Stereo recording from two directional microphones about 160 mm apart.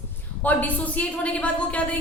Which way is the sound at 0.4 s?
10° left (ahead or behind).